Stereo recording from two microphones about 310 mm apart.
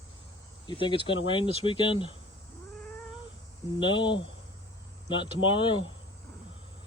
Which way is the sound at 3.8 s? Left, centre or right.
Centre.